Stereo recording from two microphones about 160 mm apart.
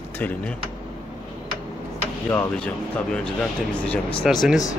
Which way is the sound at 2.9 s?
5° left (ahead or behind).